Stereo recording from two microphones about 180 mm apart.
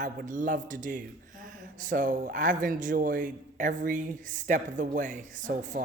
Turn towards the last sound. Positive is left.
turn(degrees=-45)  # may be behind; listen again after turning